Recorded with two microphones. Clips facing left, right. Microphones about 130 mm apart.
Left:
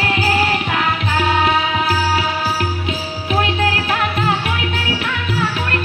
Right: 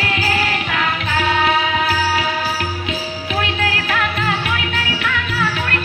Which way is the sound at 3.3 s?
35° left (ahead or behind).